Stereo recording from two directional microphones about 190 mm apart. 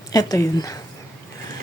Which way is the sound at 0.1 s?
20° left (ahead or behind).